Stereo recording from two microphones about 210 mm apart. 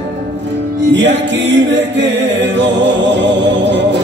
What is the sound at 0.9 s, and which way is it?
Music, 60° right (ahead or behind).